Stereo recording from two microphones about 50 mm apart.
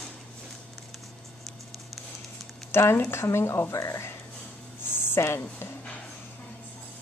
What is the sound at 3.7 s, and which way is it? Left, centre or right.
Speech, left.